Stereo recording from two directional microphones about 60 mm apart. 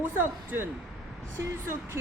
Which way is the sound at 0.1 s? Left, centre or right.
Right.